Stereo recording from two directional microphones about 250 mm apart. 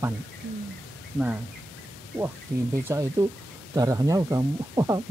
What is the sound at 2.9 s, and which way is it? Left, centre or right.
Speech, centre.